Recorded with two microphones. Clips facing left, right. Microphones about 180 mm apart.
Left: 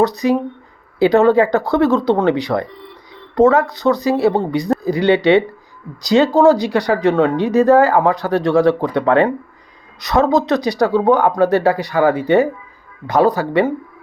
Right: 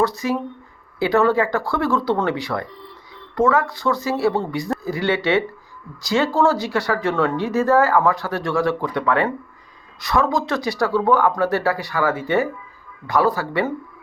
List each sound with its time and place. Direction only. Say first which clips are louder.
0.0 s speech: left 6 dB; 20° left (ahead or behind)